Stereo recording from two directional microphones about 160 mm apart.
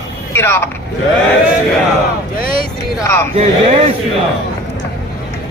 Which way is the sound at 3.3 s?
40° right (ahead or behind).